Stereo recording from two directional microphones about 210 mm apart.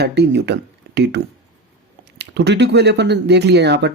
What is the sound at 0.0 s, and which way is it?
Speech, 55° right (ahead or behind).